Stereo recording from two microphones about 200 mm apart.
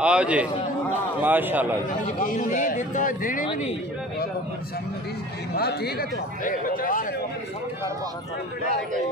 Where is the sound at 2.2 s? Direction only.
45° left (ahead or behind).